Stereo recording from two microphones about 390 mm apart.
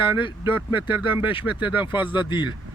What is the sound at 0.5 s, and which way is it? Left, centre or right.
Speech, centre.